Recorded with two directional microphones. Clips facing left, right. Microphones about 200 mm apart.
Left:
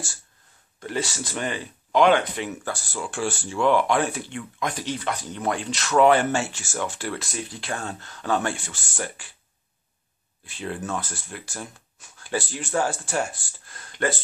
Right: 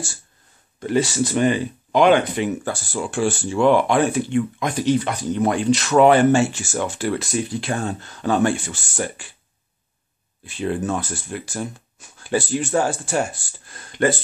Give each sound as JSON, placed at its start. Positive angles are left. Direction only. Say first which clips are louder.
{"t": 0.7, "sound": "speech", "louder": "right 9 dB", "side_deg": -15}
{"t": 10.4, "sound": "speech", "louder": "right 8 dB", "side_deg": -25}